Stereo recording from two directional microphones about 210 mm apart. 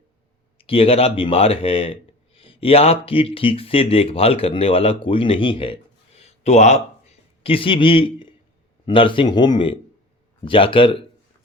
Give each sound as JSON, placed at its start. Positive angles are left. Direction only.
{"t": 0.6, "sound": "speech", "side_deg": 25}